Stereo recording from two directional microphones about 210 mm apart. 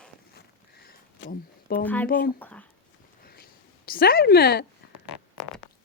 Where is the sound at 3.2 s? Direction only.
45° left (ahead or behind).